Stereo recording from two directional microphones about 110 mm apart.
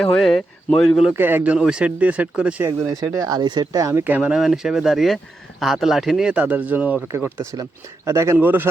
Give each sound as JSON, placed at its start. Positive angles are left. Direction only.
{"t": 0.0, "sound": "speech", "side_deg": 5}
{"t": 1.1, "sound": "speech", "side_deg": -20}
{"t": 1.5, "sound": "speech", "side_deg": -10}
{"t": 2.6, "sound": "speech", "side_deg": -35}
{"t": 4.0, "sound": "speech", "side_deg": -10}
{"t": 8.0, "sound": "speech", "side_deg": -25}